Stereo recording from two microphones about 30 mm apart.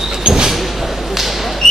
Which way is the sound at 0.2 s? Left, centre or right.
Right.